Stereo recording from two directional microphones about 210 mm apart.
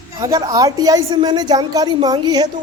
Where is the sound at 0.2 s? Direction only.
15° right (ahead or behind).